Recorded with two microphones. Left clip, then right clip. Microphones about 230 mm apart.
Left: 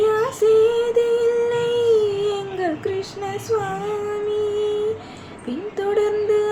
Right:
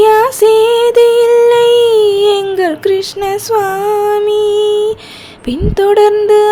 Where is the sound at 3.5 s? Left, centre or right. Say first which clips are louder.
Right 11 dB; right.